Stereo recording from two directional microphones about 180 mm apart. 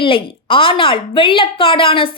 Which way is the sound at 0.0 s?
30° left (ahead or behind).